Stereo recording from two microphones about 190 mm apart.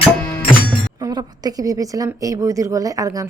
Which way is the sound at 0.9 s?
20° right (ahead or behind).